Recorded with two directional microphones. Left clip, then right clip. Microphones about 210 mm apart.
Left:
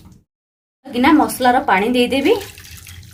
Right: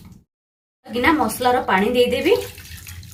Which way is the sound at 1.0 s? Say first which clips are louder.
Left 4 dB; 55° left (ahead or behind).